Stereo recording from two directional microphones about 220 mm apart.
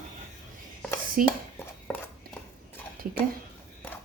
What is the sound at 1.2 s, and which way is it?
Speech, 40° right (ahead or behind).